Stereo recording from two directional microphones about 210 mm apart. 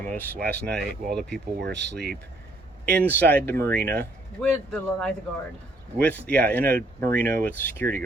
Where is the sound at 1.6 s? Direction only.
55° right (ahead or behind).